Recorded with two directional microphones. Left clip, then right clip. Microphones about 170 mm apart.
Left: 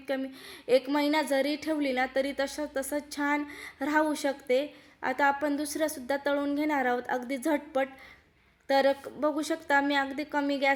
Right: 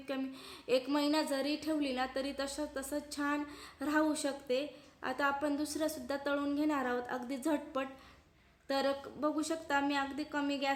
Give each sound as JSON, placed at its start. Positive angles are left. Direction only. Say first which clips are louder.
{"t": 0.1, "sound": "a woman's voice", "louder": "left 7 dB", "side_deg": 15}